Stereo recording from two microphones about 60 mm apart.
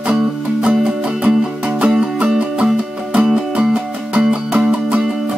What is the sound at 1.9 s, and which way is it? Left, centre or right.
Music, centre.